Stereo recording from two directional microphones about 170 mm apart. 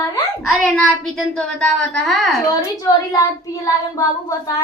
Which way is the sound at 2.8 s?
20° left (ahead or behind).